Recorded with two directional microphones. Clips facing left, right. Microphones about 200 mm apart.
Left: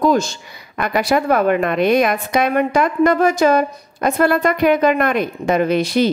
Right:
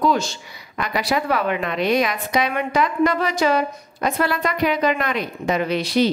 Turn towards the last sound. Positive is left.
turn(degrees=50)  # may be behind; listen again after turning